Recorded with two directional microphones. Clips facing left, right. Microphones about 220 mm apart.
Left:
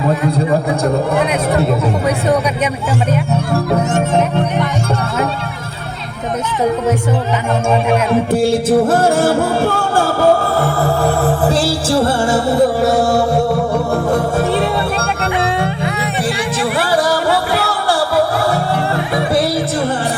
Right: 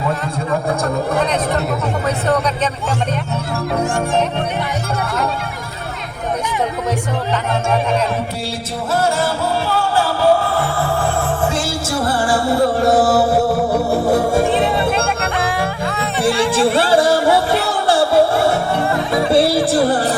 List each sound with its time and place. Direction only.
8.3 s music: 50° left (ahead or behind)
10.8 s music: 35° left (ahead or behind)
12.8 s music: centre (ahead or behind)
15.6 s music: 20° left (ahead or behind)
16.6 s music: 25° right (ahead or behind)